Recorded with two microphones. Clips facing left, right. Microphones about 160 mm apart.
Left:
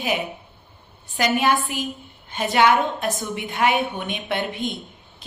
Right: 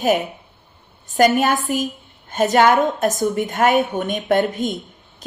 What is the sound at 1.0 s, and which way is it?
A woman's voice, 45° right (ahead or behind).